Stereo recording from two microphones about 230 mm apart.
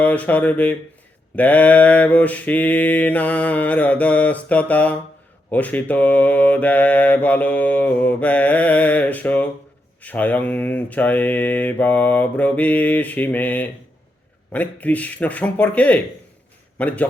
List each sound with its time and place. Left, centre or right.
0.0 s mantra: centre
16.7 s a man's voice: centre